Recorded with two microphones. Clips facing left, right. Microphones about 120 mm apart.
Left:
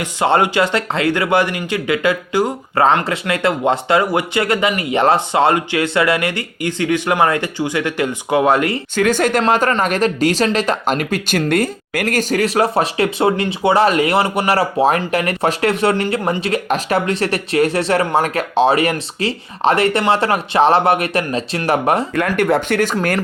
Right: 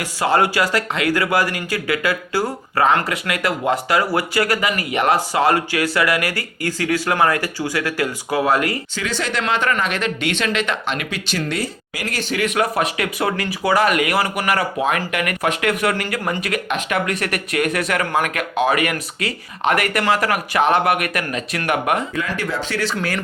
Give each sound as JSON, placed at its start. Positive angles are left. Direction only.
{"t": 0.0, "sound": "speech", "side_deg": 25}
{"t": 9.0, "sound": "speech", "side_deg": 50}
{"t": 9.4, "sound": "speech", "side_deg": 40}
{"t": 22.1, "sound": "speech", "side_deg": 60}